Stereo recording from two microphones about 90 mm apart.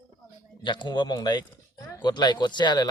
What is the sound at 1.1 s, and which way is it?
Speech, 50° left (ahead or behind).